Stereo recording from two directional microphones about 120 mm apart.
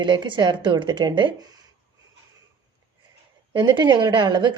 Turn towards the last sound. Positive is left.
turn(degrees=-40)  # may be behind; listen again after turning